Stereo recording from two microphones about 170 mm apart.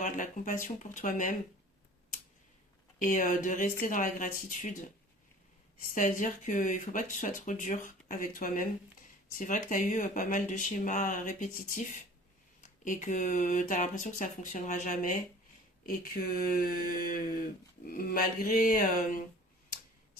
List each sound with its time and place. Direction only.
0.0 s speech: 50° left (ahead or behind)
3.0 s speech: 50° left (ahead or behind)
5.9 s speech: 50° left (ahead or behind)
15.9 s a sound: 65° left (ahead or behind)